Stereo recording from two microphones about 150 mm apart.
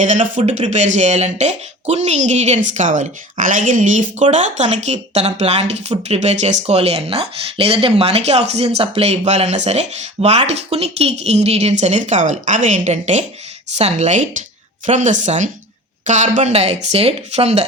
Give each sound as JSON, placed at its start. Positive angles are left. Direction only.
{"t": 0.0, "sound": "a woman's voice", "side_deg": -55}